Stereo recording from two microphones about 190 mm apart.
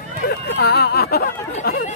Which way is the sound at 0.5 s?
60° left (ahead or behind).